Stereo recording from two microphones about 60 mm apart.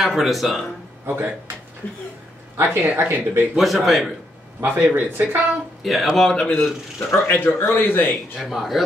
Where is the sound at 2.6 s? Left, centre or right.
Right.